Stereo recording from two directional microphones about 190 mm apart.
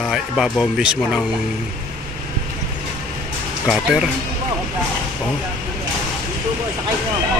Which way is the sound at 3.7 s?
5° right (ahead or behind).